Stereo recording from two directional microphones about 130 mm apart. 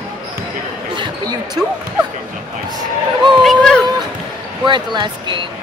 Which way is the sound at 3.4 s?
5° left (ahead or behind).